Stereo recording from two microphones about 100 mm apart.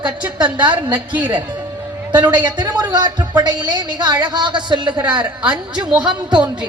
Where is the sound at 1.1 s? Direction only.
15° right (ahead or behind).